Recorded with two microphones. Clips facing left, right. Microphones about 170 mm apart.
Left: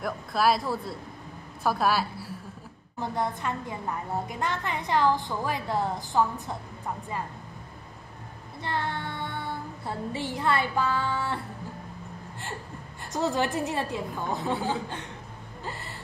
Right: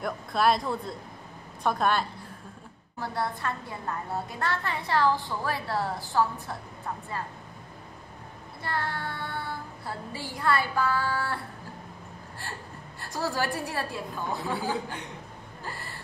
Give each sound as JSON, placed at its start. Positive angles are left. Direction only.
{"t": 0.0, "sound": "speech", "side_deg": 0}
{"t": 3.0, "sound": "a woman's voice", "side_deg": 20}
{"t": 8.6, "sound": "child singing", "side_deg": 20}
{"t": 13.0, "sound": "a woman's voice", "side_deg": 20}
{"t": 15.6, "sound": "a sound", "side_deg": 20}